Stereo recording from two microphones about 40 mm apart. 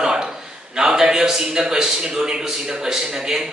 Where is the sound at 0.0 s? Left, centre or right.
Centre.